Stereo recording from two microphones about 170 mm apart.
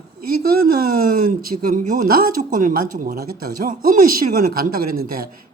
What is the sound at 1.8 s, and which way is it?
Speech, 50° right (ahead or behind).